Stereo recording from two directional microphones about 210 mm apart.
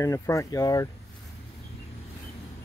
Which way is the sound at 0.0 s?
15° left (ahead or behind).